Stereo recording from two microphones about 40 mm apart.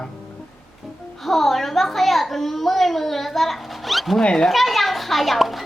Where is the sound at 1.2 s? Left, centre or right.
Centre.